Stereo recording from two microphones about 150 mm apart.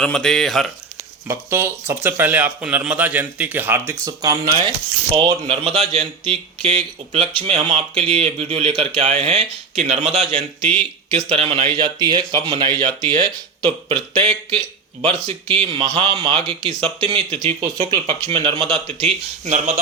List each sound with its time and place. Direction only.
0.0 s speech: 5° left (ahead or behind)
1.3 s speech: 15° right (ahead or behind); by 19.8 s 50° right (ahead or behind)